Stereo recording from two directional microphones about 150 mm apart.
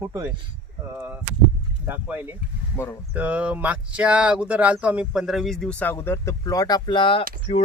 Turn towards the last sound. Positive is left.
turn(degrees=40)  # may be behind; listen again after turning